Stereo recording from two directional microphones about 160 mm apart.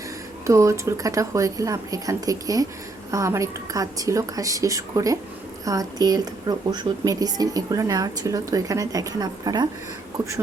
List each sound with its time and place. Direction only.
0.4 s a woman's voice: 20° right (ahead or behind)